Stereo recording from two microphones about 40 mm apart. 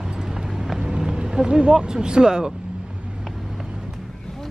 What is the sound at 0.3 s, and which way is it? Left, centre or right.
Run, centre.